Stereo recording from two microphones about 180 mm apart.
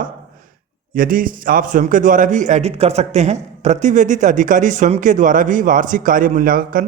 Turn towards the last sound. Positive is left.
turn(degrees=-50)  # may be behind; listen again after turning